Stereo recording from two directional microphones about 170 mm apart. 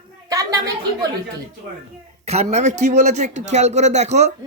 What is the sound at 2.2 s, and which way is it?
A man's voice, 40° right (ahead or behind).